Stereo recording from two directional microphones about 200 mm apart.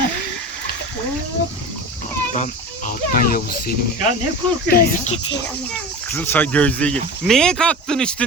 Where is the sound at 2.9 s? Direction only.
45° left (ahead or behind).